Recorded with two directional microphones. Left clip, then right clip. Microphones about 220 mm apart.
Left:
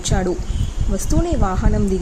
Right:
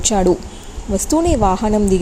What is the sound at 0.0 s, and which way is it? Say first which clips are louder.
A woman's voice: right 7 dB; 15° right (ahead or behind).